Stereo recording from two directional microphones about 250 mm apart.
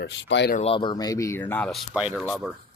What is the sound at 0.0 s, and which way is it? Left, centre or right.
Speech, left.